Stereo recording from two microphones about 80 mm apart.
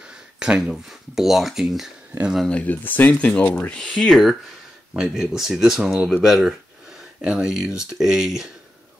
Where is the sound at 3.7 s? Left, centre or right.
Centre.